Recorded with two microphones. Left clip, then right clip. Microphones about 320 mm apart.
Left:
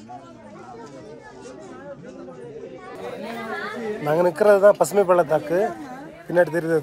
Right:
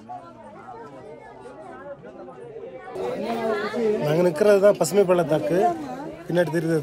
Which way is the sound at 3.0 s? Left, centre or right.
Right.